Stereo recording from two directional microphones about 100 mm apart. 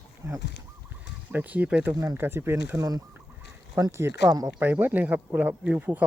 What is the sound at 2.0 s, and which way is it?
Speech, 25° right (ahead or behind).